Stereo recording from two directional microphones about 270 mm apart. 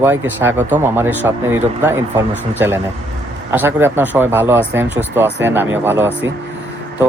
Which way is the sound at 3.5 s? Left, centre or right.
Centre.